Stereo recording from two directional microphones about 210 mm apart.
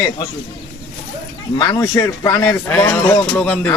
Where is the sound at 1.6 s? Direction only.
20° left (ahead or behind).